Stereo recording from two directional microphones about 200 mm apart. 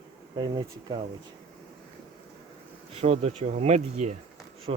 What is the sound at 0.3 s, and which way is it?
Speech, 25° right (ahead or behind).